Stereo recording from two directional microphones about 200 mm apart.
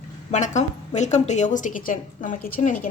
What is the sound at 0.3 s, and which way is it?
A woman's voice, 35° left (ahead or behind).